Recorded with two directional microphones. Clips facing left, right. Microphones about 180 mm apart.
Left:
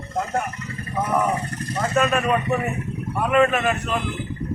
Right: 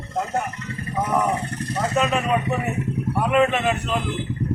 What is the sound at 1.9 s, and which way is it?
A man's voice, 20° right (ahead or behind).